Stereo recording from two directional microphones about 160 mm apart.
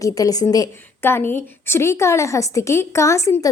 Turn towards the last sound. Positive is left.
turn(degrees=20)  # may be behind; listen again after turning